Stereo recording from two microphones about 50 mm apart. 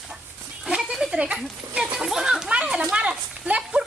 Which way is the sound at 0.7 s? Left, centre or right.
Centre.